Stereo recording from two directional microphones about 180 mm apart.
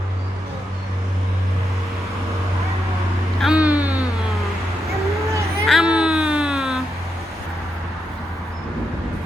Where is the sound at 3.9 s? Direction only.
20° left (ahead or behind).